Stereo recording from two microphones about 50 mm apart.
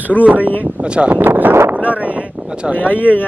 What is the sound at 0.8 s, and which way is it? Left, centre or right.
Speech, right.